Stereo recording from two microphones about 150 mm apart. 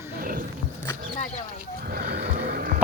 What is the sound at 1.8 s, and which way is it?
Vehicle, 90° right.